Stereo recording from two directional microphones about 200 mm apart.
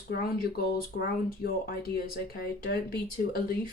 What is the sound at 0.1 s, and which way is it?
Speech, 50° left (ahead or behind).